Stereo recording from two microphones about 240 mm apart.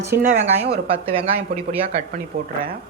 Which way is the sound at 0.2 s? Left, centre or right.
Right.